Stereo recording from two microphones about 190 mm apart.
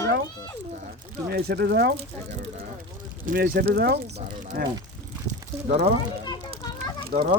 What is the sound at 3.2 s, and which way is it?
Speech, 45° right (ahead or behind).